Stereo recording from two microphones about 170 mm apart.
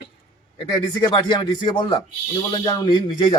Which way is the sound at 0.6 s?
25° left (ahead or behind).